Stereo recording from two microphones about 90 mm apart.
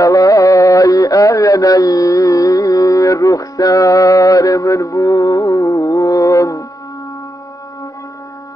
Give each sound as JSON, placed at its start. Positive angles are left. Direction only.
{"t": 0.0, "sound": "music", "side_deg": 40}